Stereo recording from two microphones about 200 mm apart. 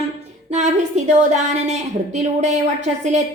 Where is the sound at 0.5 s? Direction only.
35° right (ahead or behind).